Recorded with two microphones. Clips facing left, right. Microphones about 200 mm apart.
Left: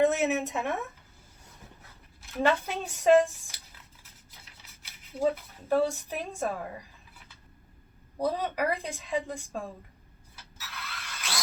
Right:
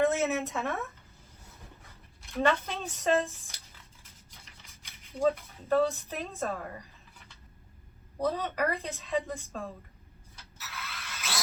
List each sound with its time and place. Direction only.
0.0 s a woman's voice: 15° left (ahead or behind)
2.3 s a woman's voice: 10° left (ahead or behind)
4.6 s a sound: 5° left (ahead or behind)
5.3 s a woman's voice: 10° left (ahead or behind)
8.2 s a woman's voice: 10° left (ahead or behind)
10.6 s mechanisms: centre (ahead or behind)